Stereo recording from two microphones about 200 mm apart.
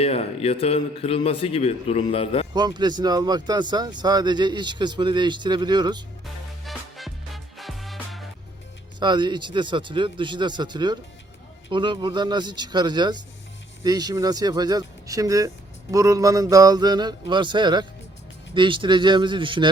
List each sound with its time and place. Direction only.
0.0 s a man's voice: 30° left (ahead or behind)
2.5 s speech: 20° right (ahead or behind)
6.7 s music: centre (ahead or behind)
9.0 s speech: 20° right (ahead or behind)